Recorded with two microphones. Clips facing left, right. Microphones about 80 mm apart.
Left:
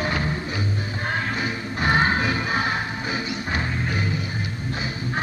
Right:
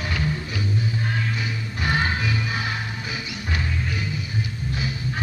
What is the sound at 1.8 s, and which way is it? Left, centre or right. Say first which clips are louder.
Music: left 4 dB; left.